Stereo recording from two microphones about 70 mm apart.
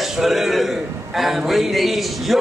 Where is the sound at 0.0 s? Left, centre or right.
Centre.